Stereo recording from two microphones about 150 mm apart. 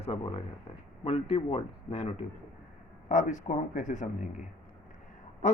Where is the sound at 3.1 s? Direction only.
55° left (ahead or behind).